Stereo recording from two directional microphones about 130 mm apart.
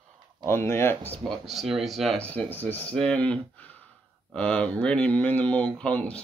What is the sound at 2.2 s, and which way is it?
Speech, 10° left (ahead or behind).